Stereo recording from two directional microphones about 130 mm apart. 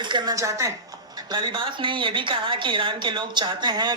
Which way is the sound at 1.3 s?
40° right (ahead or behind).